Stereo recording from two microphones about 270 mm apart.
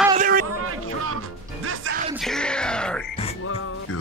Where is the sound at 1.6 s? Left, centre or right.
Right.